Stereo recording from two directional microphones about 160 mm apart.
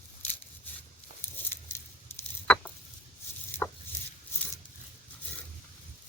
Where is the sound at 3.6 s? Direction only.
15° left (ahead or behind).